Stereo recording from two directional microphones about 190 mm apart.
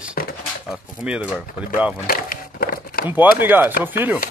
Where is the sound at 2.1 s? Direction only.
50° left (ahead or behind).